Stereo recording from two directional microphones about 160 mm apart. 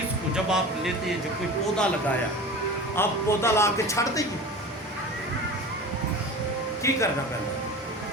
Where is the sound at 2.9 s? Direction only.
15° left (ahead or behind).